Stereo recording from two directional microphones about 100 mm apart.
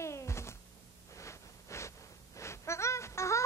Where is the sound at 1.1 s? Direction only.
30° left (ahead or behind).